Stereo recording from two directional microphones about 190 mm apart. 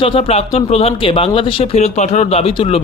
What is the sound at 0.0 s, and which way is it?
Speech, 30° left (ahead or behind).